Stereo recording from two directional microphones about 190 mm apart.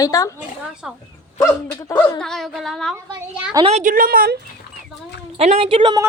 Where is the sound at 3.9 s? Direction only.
50° right (ahead or behind).